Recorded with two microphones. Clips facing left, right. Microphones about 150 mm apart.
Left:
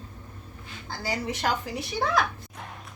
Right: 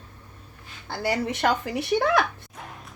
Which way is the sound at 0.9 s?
60° right (ahead or behind).